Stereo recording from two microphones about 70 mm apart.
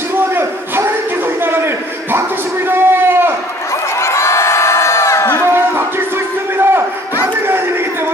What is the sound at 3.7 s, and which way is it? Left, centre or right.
Crowd, left.